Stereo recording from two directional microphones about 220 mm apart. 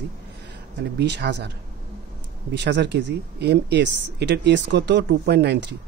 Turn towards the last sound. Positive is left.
turn(degrees=-50)  # may be behind; listen again after turning